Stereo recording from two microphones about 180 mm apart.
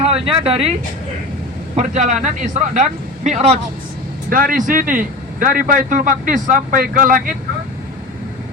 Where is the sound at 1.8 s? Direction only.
40° right (ahead or behind).